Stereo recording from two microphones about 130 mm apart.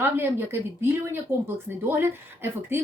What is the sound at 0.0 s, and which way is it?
Speech, 15° right (ahead or behind).